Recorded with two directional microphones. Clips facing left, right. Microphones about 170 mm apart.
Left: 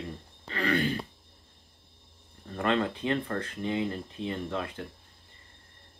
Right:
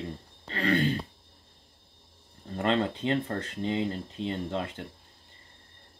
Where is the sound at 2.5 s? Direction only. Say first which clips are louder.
Right 1 dB; 30° right (ahead or behind).